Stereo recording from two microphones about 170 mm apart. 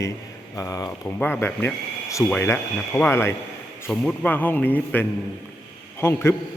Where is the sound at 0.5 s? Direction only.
20° left (ahead or behind).